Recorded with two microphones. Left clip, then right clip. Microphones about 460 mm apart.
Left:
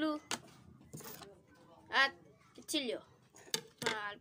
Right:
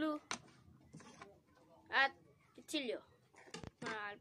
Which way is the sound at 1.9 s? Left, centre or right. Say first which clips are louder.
Left 3 dB; right.